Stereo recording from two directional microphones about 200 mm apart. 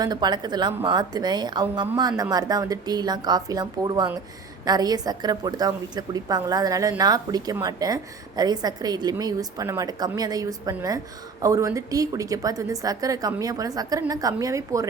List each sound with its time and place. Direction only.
0.0 s a woman's voice: 20° right (ahead or behind)